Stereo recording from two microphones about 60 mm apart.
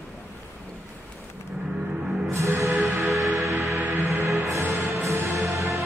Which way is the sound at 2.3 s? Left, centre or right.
Right.